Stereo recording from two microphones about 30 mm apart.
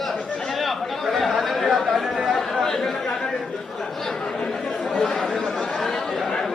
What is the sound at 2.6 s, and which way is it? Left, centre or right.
Chatter, centre.